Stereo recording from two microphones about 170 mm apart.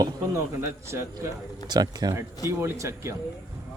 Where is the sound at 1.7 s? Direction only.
25° right (ahead or behind).